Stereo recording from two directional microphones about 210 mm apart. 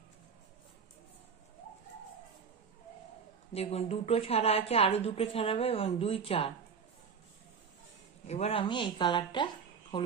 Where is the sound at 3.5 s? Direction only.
30° left (ahead or behind).